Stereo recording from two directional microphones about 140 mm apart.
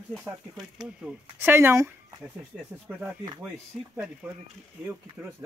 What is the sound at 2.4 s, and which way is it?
Speech, 5° right (ahead or behind).